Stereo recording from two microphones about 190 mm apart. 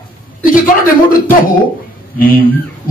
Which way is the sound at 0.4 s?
45° left (ahead or behind).